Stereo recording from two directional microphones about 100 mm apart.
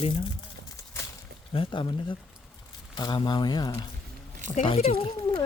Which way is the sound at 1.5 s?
60° left (ahead or behind).